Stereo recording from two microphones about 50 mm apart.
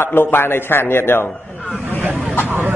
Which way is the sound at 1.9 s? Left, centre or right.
Right.